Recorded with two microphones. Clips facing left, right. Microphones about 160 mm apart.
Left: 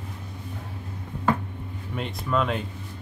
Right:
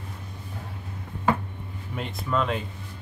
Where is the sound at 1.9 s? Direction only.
Centre (ahead or behind).